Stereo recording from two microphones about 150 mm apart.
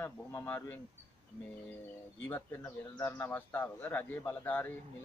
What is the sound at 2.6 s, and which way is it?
Speech, 20° left (ahead or behind).